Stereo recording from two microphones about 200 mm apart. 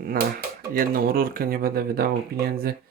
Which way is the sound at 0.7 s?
45° right (ahead or behind).